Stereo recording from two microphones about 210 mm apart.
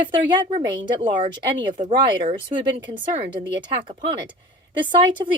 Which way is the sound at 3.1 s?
20° right (ahead or behind).